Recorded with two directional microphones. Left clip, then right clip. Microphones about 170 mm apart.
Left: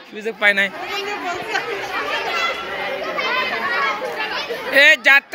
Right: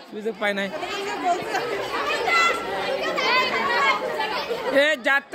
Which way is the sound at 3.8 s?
25° right (ahead or behind).